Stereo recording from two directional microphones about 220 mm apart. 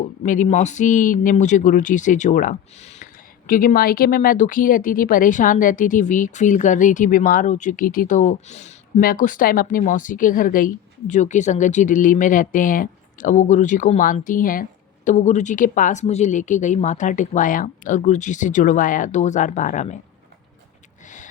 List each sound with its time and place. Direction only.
0.2 s speech: 35° left (ahead or behind)